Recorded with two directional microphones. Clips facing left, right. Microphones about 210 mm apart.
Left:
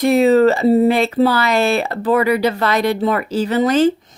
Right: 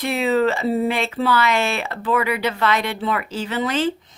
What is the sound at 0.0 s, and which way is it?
Speech, 40° left (ahead or behind).